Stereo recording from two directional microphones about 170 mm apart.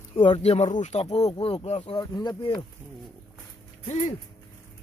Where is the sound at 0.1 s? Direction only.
35° left (ahead or behind).